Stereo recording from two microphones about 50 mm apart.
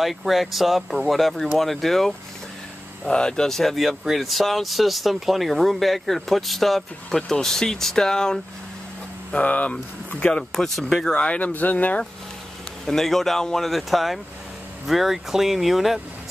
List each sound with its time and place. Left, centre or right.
0.0 s speech: centre
3.1 s speech: centre
9.3 s speech: left
10.5 s speech: centre
11.4 s speech: left
12.8 s speech: centre